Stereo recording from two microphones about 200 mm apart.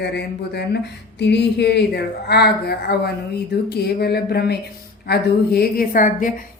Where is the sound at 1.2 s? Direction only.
60° left (ahead or behind).